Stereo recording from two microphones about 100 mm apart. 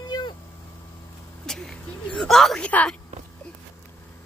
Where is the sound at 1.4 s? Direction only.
5° left (ahead or behind).